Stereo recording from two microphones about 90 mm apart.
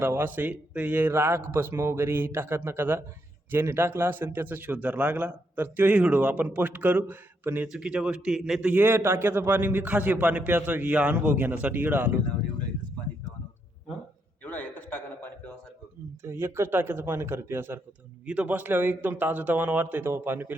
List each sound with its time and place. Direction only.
0.0 s a man's voice: 25° right (ahead or behind)
7.7 s a man's voice: 10° right (ahead or behind)
8.7 s a man's voice: 25° right (ahead or behind)
14.4 s a sound: 20° left (ahead or behind)
16.2 s a man's voice: 30° right (ahead or behind)
18.3 s a man's voice: 15° right (ahead or behind)